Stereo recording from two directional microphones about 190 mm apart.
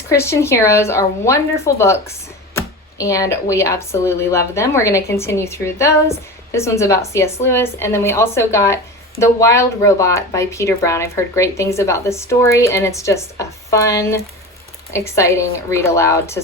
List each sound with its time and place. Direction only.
0.1 s speech: 15° left (ahead or behind)